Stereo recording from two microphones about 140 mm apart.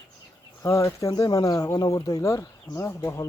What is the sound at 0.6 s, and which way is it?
Speech, 20° left (ahead or behind).